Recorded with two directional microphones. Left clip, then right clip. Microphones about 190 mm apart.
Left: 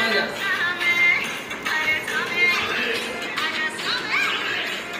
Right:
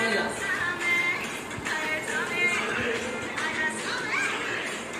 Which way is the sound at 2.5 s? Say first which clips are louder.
Left 5 dB; 25° left (ahead or behind).